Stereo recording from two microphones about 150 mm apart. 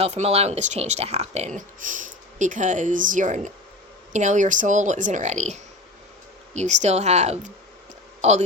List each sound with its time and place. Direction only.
0.0 s speech: 45° right (ahead or behind)